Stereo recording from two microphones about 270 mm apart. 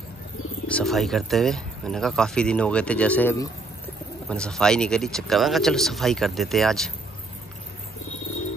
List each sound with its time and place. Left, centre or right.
0.7 s speech: centre